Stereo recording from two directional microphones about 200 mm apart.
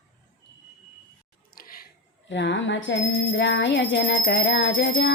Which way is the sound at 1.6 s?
45° left (ahead or behind).